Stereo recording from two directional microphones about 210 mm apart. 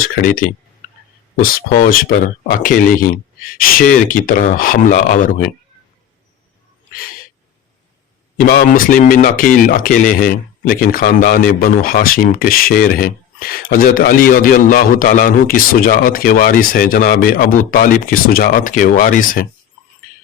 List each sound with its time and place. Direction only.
0.8 s a sound: 40° left (ahead or behind)
1.4 s a man's voice: 45° left (ahead or behind)
8.4 s a man's voice: 45° left (ahead or behind)